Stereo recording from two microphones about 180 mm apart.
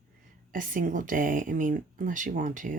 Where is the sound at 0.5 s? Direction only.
50° right (ahead or behind).